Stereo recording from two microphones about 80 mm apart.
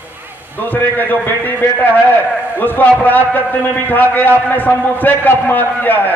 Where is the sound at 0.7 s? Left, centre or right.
Left.